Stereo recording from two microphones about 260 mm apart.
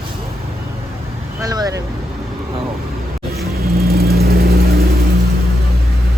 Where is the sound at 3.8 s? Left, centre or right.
Right.